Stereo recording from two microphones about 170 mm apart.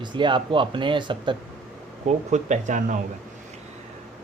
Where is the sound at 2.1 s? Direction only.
45° right (ahead or behind).